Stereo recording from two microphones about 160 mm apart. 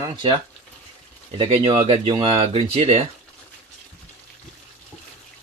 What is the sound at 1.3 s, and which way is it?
Speech, 35° right (ahead or behind).